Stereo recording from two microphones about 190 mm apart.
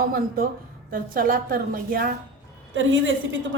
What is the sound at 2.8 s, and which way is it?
Speech, 90° right.